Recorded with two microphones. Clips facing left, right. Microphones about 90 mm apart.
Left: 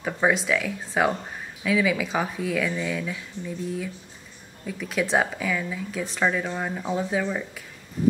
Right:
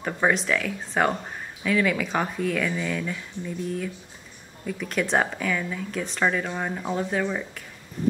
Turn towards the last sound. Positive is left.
turn(degrees=0)  # may be behind; listen again after turning